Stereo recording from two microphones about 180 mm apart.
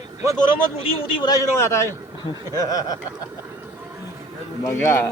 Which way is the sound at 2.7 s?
20° left (ahead or behind).